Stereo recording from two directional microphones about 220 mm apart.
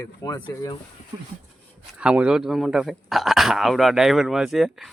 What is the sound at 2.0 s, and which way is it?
Speech, 5° right (ahead or behind).